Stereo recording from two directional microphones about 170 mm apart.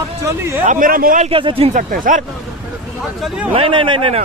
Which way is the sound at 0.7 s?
55° right (ahead or behind).